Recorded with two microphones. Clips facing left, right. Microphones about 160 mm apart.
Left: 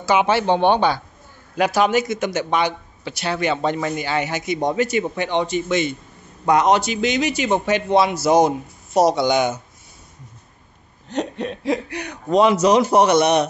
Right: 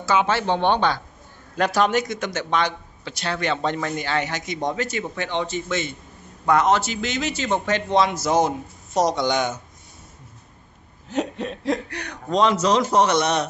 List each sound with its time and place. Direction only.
0.0 s speech: 15° left (ahead or behind)
11.1 s speech: 5° right (ahead or behind); by 13.5 s 15° left (ahead or behind)